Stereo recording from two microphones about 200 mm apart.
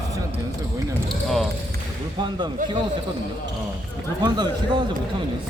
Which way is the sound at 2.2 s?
20° right (ahead or behind).